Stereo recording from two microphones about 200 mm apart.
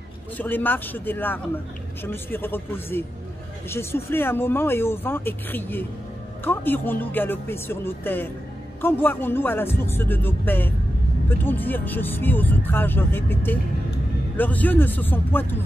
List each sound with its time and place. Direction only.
0.4 s speech: 10° left (ahead or behind)